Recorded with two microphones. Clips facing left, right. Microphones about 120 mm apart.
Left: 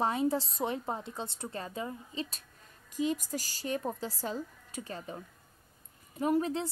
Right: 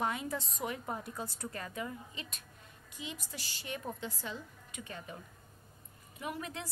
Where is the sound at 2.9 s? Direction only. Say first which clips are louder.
Left 13 dB; 45° left (ahead or behind).